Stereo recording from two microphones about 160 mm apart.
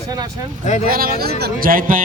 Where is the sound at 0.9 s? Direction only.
65° right (ahead or behind).